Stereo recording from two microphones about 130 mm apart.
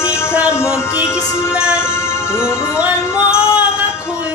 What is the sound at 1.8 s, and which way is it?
Music, 20° left (ahead or behind).